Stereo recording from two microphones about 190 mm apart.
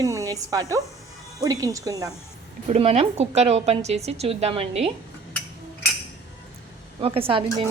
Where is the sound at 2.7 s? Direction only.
35° right (ahead or behind).